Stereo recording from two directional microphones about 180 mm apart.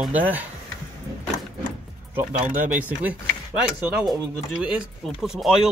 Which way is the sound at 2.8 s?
10° right (ahead or behind).